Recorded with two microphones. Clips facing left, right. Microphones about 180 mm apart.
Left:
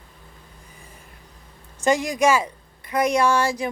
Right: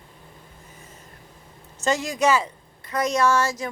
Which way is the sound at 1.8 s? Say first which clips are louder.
Left 3 dB; 15° left (ahead or behind).